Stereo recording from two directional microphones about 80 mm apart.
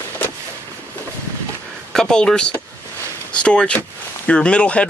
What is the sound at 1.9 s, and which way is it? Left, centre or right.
Speech, centre.